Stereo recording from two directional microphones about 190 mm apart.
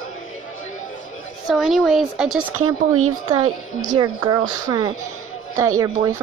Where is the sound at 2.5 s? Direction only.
90° right.